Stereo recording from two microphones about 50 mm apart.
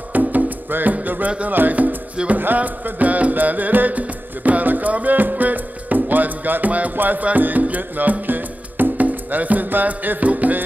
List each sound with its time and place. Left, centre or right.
0.1 s music: right
1.4 s speech: right
2.3 s music: right